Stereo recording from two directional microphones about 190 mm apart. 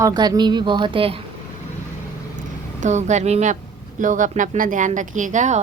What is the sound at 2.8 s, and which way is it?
Speech, 40° right (ahead or behind).